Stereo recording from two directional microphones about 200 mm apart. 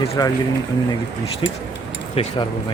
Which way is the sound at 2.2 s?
30° left (ahead or behind).